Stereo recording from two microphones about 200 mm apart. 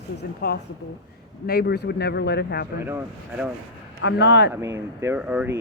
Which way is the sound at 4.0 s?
60° left (ahead or behind).